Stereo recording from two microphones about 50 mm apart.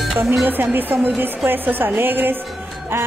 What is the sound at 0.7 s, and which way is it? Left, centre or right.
A woman's voice, right.